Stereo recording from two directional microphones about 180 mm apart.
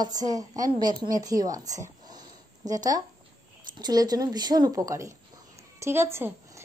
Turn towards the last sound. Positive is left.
turn(degrees=-10)  # may be behind; listen again after turning